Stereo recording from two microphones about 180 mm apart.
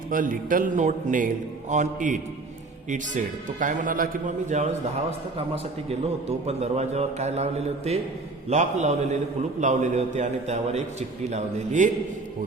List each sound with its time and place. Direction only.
0.1 s a man's voice: 50° right (ahead or behind)
5.9 s a man's voice: 35° right (ahead or behind)